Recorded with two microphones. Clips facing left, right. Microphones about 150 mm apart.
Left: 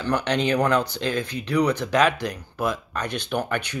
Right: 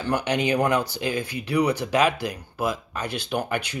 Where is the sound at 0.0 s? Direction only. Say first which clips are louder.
Left 1 dB; 10° right (ahead or behind).